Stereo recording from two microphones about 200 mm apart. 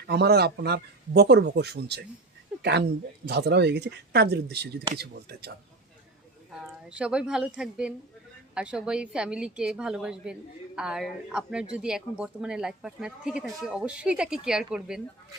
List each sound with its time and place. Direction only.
0.1 s speech: 55° right (ahead or behind)
6.5 s speech: 5° right (ahead or behind)